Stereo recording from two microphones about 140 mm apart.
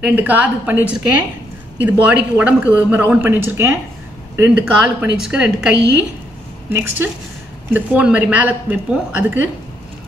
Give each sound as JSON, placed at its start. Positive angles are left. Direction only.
{"t": 0.0, "sound": "a woman's voice", "side_deg": -10}